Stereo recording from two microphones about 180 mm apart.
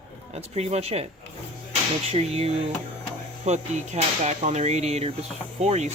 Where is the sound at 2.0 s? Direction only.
35° right (ahead or behind).